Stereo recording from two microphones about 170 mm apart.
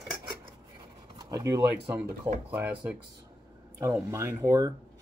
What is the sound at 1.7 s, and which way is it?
Speech, 10° right (ahead or behind).